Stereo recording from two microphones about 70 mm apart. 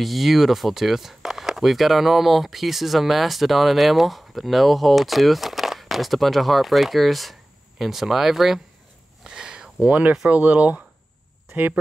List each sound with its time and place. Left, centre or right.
0.0 s speech: centre
9.2 s a sound: centre
10.3 s speech: right